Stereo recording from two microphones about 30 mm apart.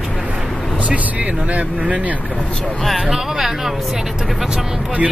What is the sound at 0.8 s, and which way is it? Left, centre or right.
Speech, right.